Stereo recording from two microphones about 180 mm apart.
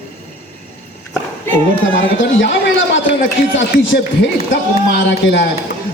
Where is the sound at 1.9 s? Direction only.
90° left.